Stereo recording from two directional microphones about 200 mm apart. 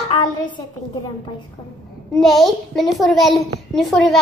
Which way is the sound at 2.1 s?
Centre (ahead or behind).